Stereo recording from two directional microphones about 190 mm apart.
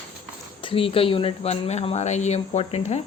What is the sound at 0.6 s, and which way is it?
Speech, 30° left (ahead or behind).